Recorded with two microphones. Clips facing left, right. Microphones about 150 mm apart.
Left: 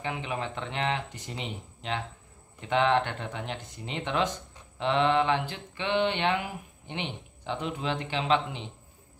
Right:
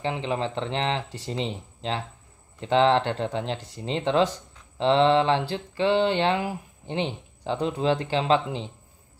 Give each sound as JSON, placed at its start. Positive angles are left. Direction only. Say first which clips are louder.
{"t": 0.0, "sound": "speech", "louder": "right 6 dB", "side_deg": -30}
{"t": 4.7, "sound": "mantra", "louder": "right 5 dB", "side_deg": -30}